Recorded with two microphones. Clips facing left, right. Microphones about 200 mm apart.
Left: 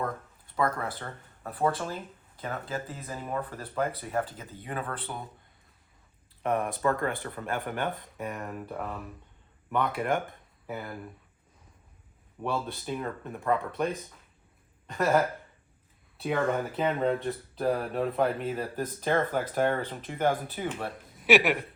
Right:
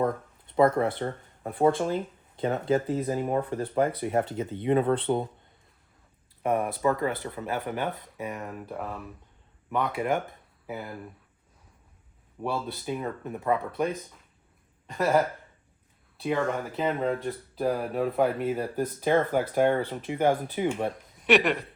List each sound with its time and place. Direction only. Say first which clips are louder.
0.0 s a sound: right 7 dB; 25° right (ahead or behind)
0.9 s speech: right 9 dB; 25° right (ahead or behind)
6.4 s speech: right 2 dB; 5° right (ahead or behind)
12.4 s speech: right 1 dB; 5° right (ahead or behind)
14.8 s a sound: right 1 dB; centre (ahead or behind)
16.1 s speech: even; centre (ahead or behind); by 20.9 s 15° right (ahead or behind)
21.2 s speech: even; 5° left (ahead or behind)